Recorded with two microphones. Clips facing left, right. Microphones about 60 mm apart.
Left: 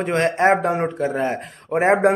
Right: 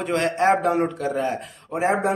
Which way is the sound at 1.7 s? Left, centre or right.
Left.